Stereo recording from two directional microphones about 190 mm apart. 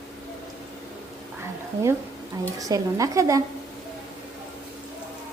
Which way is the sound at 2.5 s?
20° right (ahead or behind).